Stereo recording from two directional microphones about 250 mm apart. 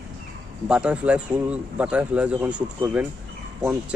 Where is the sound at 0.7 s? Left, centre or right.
Centre.